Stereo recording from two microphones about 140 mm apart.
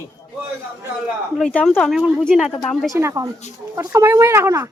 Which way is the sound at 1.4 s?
5° left (ahead or behind).